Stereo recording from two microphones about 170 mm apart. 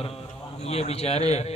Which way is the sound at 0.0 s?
35° left (ahead or behind).